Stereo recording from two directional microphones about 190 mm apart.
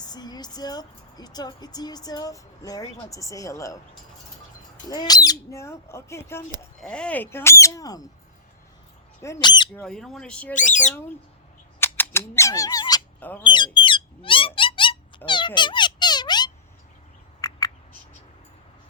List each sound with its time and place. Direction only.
0.0 s speech: 20° left (ahead or behind)
4.9 s speech: 20° left (ahead or behind)
9.2 s speech: 20° left (ahead or behind)
9.7 s speech: 5° left (ahead or behind)
10.5 s speech: 40° left (ahead or behind)
11.8 s speech: 10° left (ahead or behind)
13.1 s speech: 10° left (ahead or behind)
13.4 s squawk: 25° left (ahead or behind)